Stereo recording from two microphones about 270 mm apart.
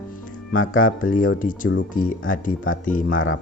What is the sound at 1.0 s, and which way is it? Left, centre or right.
Speech, left.